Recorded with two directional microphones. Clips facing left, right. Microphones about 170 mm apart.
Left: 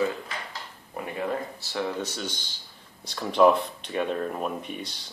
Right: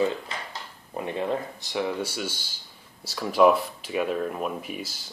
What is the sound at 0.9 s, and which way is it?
Speech, 25° right (ahead or behind).